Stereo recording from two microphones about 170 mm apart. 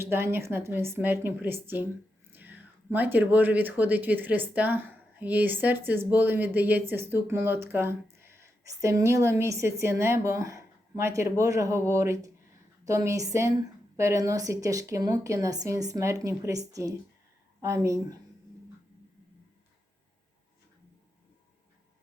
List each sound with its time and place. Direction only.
0.0 s a woman's voice: 15° right (ahead or behind)